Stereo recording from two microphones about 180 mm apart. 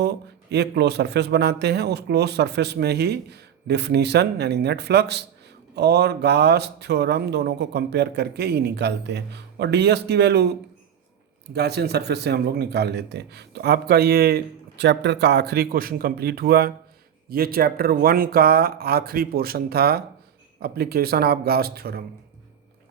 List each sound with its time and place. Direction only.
0.0 s speech: 65° right (ahead or behind)
11.5 s speech: 65° right (ahead or behind)